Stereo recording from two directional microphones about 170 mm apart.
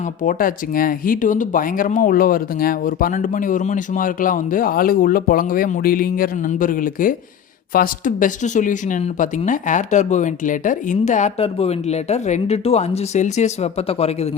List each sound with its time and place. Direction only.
0.2 s speech: 55° left (ahead or behind); by 14.3 s 35° left (ahead or behind)